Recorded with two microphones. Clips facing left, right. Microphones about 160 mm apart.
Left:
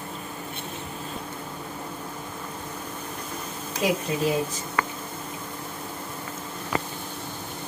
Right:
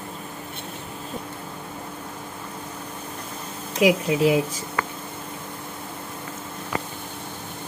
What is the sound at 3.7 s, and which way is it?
Speech, 90° right.